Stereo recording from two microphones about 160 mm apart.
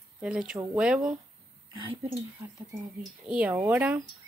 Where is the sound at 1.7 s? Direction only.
30° right (ahead or behind).